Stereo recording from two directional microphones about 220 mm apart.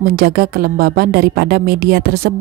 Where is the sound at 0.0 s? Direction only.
40° right (ahead or behind).